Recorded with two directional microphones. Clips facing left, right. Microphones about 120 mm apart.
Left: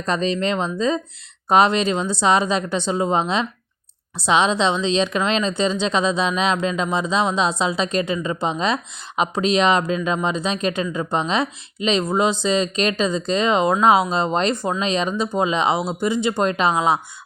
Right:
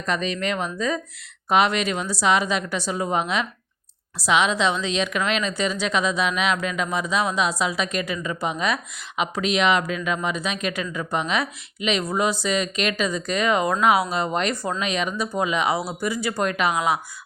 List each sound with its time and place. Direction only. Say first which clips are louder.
0.0 s a woman's voice: left 4 dB; 30° left (ahead or behind)
14.8 s a woman's voice: left 5 dB; 30° left (ahead or behind)